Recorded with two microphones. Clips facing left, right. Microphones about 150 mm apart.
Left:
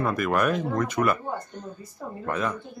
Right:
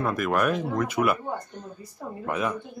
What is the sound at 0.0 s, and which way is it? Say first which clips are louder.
Speech: even; centre (ahead or behind).